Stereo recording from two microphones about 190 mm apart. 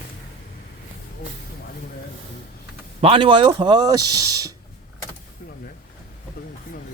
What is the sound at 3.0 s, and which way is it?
Speech, 30° right (ahead or behind).